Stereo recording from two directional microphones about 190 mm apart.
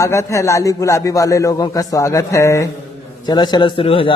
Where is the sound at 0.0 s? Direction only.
15° left (ahead or behind).